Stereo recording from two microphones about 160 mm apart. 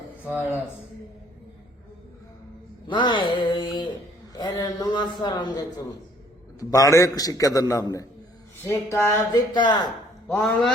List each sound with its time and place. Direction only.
2.8 s a man's voice: 30° left (ahead or behind)
10.2 s speech: 10° left (ahead or behind)